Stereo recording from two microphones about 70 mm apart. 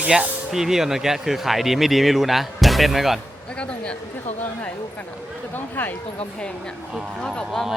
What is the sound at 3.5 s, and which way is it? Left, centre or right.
Speech, centre.